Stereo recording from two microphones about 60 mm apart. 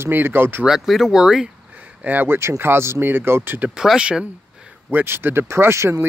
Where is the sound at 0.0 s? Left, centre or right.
Right.